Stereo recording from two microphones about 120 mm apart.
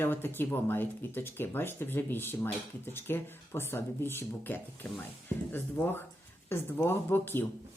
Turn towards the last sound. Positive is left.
turn(degrees=15)  # may be behind; listen again after turning